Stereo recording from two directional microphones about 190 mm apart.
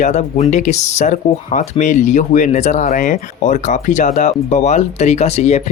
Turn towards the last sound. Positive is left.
turn(degrees=35)  # may be behind; listen again after turning